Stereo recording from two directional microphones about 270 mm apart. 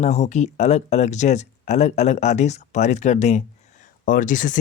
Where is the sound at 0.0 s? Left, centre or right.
Left.